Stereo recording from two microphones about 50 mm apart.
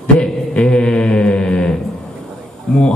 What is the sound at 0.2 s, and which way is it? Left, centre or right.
Mantra, centre.